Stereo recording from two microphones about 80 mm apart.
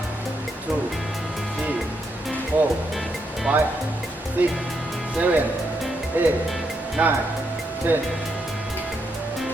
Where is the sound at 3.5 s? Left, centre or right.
Centre.